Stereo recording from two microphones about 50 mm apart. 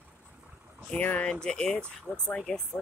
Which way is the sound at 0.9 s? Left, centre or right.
Left.